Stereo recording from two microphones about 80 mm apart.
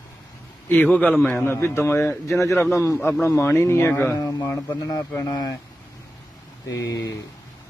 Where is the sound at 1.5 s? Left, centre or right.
Left.